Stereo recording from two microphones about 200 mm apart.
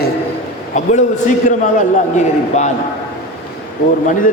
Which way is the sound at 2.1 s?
35° left (ahead or behind).